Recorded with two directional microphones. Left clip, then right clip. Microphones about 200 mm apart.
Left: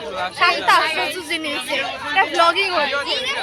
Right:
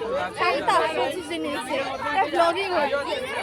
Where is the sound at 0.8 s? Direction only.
10° right (ahead or behind).